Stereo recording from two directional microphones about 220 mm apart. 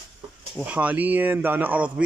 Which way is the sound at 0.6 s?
5° right (ahead or behind).